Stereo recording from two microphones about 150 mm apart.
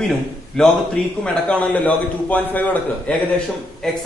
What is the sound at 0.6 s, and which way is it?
A man's voice, 5° left (ahead or behind).